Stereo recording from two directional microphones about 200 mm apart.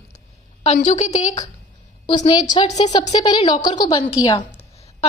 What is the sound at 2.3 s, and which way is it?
A woman's voice, 20° left (ahead or behind).